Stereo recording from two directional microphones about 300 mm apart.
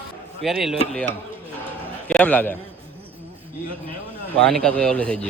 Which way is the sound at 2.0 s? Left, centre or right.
Centre.